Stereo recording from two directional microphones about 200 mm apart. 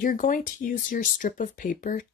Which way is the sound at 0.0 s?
45° left (ahead or behind).